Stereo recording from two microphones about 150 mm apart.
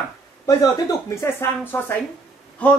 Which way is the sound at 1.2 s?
15° left (ahead or behind).